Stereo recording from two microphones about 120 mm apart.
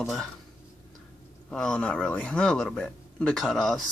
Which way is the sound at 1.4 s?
10° left (ahead or behind).